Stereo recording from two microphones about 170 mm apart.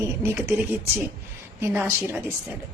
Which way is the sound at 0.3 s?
15° right (ahead or behind).